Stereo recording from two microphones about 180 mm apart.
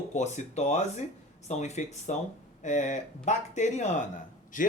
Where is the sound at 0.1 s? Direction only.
40° left (ahead or behind).